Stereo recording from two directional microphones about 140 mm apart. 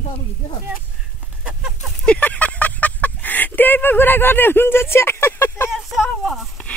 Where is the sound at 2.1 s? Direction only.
10° left (ahead or behind).